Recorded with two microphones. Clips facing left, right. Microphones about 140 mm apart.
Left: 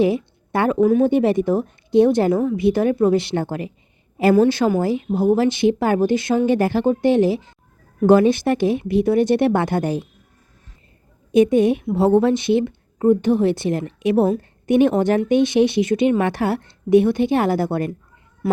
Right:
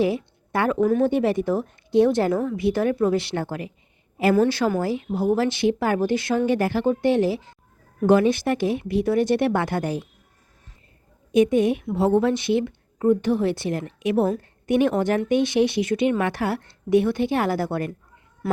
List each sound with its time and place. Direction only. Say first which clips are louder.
0.0 s a woman's voice: left 4 dB; 20° left (ahead or behind)
0.8 s speech: left 5 dB; 10° left (ahead or behind)
1.1 s a woman's voice: left 4 dB; 20° left (ahead or behind)
8.0 s a woman's voice: left 4 dB; 30° left (ahead or behind)
11.3 s a woman's voice: left 4 dB; 30° left (ahead or behind)